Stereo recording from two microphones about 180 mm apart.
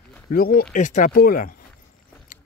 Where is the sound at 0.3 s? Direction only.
55° left (ahead or behind).